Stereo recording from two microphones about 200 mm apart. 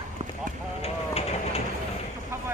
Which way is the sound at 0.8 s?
30° left (ahead or behind).